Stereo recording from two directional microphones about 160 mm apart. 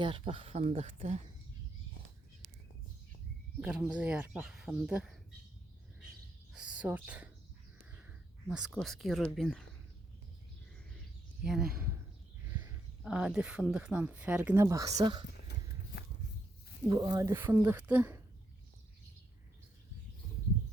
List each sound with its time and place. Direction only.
0.0 s speech: 35° right (ahead or behind)
3.6 s speech: 5° right (ahead or behind)
6.5 s speech: 5° right (ahead or behind)
11.4 s speech: centre (ahead or behind)
13.0 s speech: 5° right (ahead or behind); by 15.2 s 25° right (ahead or behind)
16.9 s speech: 20° right (ahead or behind)